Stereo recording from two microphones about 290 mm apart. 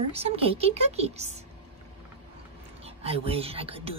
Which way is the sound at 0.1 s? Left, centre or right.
Right.